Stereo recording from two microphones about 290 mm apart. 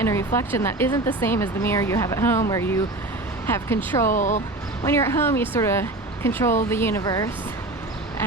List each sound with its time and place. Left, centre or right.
0.0 s a sound: centre
0.3 s speech: centre
4.1 s speech: left
4.9 s speech: centre